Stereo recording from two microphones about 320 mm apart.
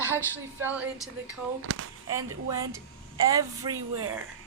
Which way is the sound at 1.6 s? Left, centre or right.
Right.